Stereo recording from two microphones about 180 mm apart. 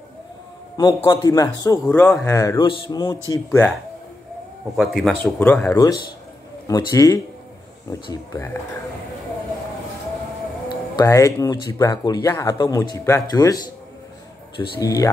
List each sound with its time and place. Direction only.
0.7 s speech: 25° left (ahead or behind)
4.7 s speech: centre (ahead or behind); by 8.5 s 20° left (ahead or behind)
10.7 s speech: 20° left (ahead or behind)
14.6 s speech: 20° left (ahead or behind)